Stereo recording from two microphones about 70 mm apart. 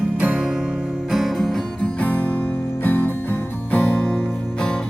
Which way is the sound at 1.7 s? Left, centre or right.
Centre.